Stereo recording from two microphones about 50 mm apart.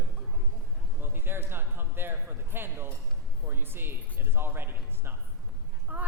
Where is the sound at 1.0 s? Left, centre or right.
Right.